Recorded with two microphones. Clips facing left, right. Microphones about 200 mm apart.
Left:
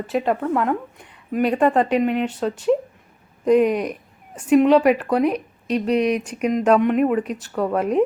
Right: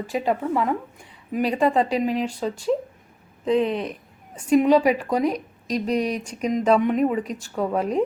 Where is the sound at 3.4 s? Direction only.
10° left (ahead or behind).